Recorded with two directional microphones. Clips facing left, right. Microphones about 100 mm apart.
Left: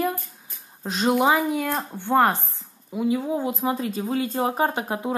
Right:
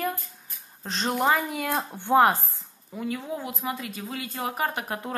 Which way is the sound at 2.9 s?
15° left (ahead or behind).